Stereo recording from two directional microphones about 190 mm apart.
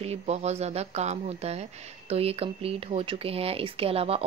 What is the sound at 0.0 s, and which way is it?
A woman's voice, 35° right (ahead or behind).